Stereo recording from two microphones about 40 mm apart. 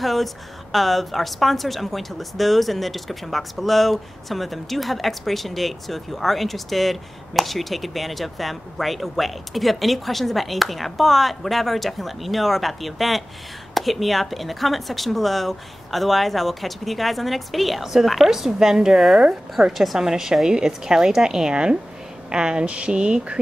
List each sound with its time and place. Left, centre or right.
0.0 s a woman's voice: centre; by 23.4 s right